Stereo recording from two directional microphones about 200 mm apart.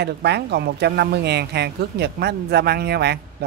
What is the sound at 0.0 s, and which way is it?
Speech, 55° right (ahead or behind).